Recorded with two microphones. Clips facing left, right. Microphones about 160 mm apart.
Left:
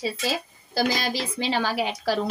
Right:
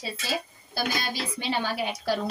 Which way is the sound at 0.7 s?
90° left.